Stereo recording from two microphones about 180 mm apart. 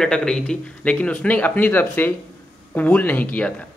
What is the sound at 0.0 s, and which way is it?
A man's voice, 5° left (ahead or behind).